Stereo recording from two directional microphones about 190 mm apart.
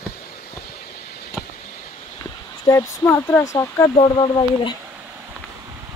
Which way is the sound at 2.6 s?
15° left (ahead or behind).